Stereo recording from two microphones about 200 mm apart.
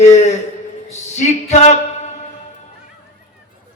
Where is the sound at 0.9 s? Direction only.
35° left (ahead or behind).